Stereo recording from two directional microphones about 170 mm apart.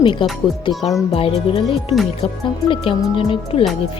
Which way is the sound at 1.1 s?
35° left (ahead or behind).